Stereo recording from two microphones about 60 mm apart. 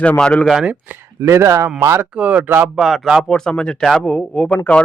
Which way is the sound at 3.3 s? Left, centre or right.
Centre.